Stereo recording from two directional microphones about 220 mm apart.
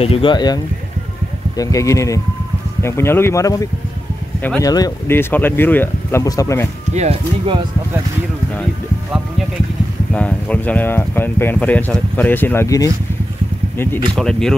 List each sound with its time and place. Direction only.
0.0 s speech: 25° left (ahead or behind)
1.6 s speech: 15° left (ahead or behind)
6.9 s speech: 30° right (ahead or behind)
10.1 s speech: 5° left (ahead or behind)
14.1 s speech: centre (ahead or behind)